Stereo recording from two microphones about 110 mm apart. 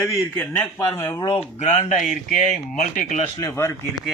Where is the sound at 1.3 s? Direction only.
75° left (ahead or behind).